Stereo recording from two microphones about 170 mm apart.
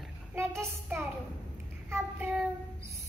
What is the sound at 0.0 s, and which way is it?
Child singing, 10° right (ahead or behind).